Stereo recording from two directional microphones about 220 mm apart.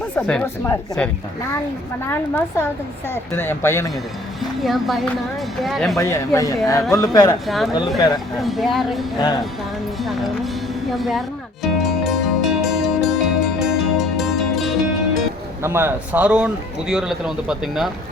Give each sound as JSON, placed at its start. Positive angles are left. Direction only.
{"t": 0.2, "sound": "a man's voice", "side_deg": 5}
{"t": 4.6, "sound": "a man's voice", "side_deg": 0}
{"t": 6.0, "sound": "speech", "side_deg": 15}
{"t": 7.4, "sound": "a man's voice", "side_deg": 0}
{"t": 7.7, "sound": "speech", "side_deg": 20}
{"t": 8.4, "sound": "a man's voice", "side_deg": 0}
{"t": 11.6, "sound": "music", "side_deg": 0}
{"t": 15.6, "sound": "a man's voice", "side_deg": -10}